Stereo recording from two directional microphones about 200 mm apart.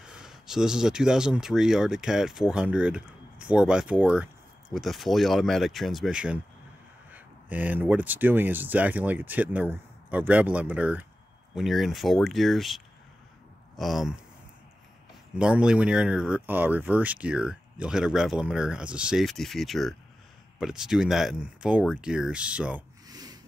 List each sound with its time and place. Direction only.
0.0 s speech: 5° right (ahead or behind)
15.3 s speech: 5° right (ahead or behind)
23.0 s a sound: 20° right (ahead or behind)